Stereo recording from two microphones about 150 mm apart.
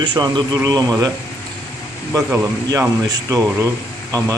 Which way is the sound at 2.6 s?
25° right (ahead or behind).